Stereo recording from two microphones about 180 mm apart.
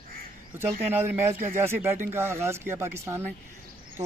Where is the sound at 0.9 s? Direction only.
10° right (ahead or behind).